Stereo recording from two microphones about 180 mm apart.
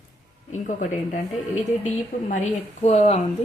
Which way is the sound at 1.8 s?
45° left (ahead or behind).